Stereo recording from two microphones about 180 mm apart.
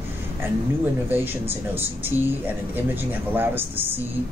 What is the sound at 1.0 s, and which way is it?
Speech, 10° right (ahead or behind).